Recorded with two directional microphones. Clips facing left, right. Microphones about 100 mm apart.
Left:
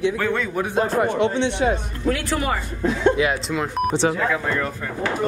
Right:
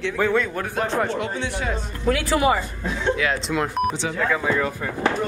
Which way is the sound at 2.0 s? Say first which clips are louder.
Right 4 dB; 5° right (ahead or behind).